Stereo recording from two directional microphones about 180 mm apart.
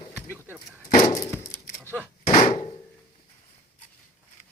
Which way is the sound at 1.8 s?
10° left (ahead or behind).